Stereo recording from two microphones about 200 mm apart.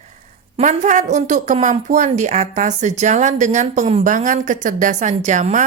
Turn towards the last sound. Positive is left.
turn(degrees=-40)  # may be behind; listen again after turning